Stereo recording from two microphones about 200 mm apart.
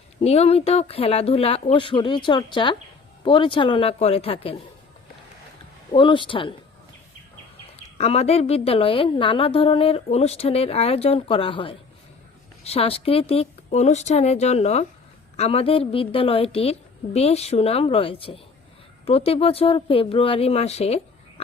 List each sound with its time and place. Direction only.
0.2 s a woman's voice: 30° left (ahead or behind)
5.9 s a woman's voice: 25° left (ahead or behind)
7.9 s a woman's voice: 30° left (ahead or behind)